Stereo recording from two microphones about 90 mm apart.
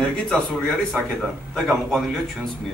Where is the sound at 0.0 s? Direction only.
5° left (ahead or behind).